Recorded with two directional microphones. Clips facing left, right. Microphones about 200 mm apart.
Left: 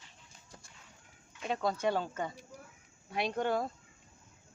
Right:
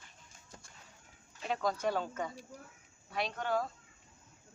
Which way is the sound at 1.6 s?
25° left (ahead or behind).